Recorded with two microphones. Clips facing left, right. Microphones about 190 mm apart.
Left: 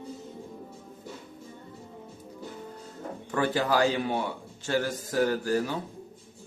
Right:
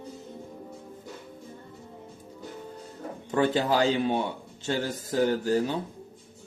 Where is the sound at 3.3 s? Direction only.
20° right (ahead or behind).